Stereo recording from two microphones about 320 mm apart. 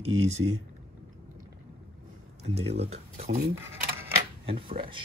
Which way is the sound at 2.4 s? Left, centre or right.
Centre.